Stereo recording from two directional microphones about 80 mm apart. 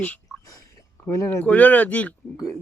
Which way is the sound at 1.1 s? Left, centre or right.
Left.